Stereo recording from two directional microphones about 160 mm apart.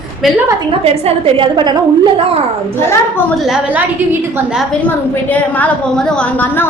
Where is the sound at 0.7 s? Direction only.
40° right (ahead or behind).